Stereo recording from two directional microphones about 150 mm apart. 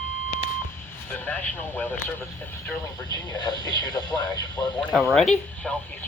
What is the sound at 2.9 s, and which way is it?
Speech, 25° left (ahead or behind).